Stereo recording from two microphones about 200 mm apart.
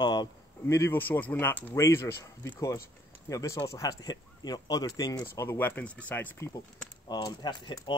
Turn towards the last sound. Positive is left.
turn(degrees=25)  # may be behind; listen again after turning